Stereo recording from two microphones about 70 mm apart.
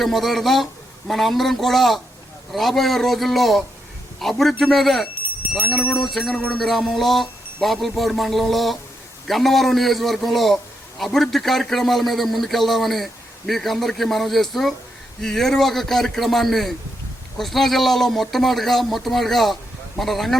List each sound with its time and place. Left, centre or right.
0.0 s a man's voice: centre
6.3 s a sound: centre
6.6 s a man's voice: centre